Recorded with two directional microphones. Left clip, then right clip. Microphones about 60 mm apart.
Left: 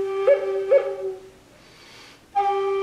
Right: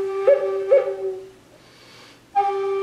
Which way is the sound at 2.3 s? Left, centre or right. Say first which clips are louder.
Right 1 dB; centre.